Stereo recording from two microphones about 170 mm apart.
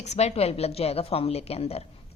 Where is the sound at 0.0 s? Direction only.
40° left (ahead or behind).